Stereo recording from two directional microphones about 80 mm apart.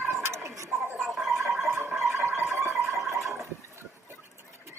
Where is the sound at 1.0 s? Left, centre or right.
Centre.